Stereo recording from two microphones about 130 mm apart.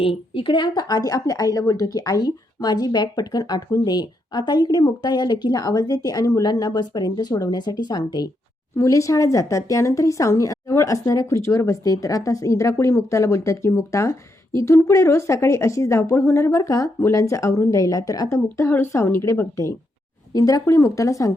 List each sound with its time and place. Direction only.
0.0 s a woman's voice: 45° left (ahead or behind); by 21.3 s 25° left (ahead or behind)